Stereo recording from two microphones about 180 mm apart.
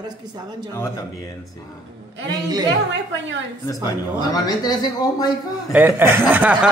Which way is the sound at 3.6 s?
20° left (ahead or behind).